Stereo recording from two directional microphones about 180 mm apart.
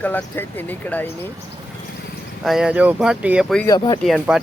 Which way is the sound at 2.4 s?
5° right (ahead or behind).